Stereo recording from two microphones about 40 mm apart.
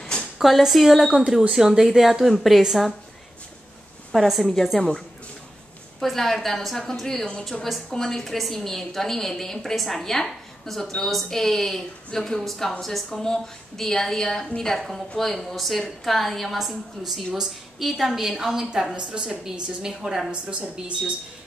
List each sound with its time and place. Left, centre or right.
0.4 s a woman's voice: centre
4.1 s a woman's voice: centre
5.9 s a woman's voice: centre
18.9 s a woman's voice: right
20.2 s speech: right